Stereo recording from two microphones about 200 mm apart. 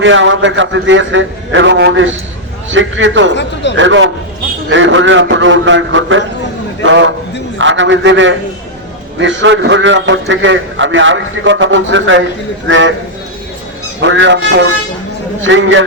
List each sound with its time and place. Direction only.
0.0 s a man's voice: 70° right (ahead or behind)
3.3 s speech: 60° left (ahead or behind)
3.8 s a man's voice: 70° right (ahead or behind)
14.0 s speech: 65° right (ahead or behind)
15.4 s a man's voice: 70° right (ahead or behind)